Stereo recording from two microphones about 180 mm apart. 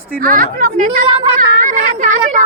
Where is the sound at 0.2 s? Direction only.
50° right (ahead or behind).